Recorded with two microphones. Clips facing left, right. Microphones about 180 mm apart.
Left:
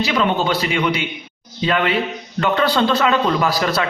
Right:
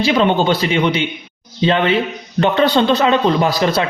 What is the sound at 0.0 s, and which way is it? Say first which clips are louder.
A man's voice: right 4 dB; 30° right (ahead or behind).